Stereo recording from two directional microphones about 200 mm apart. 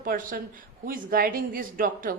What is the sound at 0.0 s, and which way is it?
A woman's voice, 45° right (ahead or behind).